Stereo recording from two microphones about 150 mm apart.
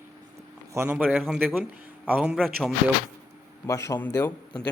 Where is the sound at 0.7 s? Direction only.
15° right (ahead or behind).